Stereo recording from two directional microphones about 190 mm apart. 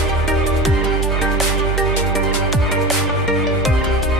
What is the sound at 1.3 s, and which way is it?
Music, centre (ahead or behind).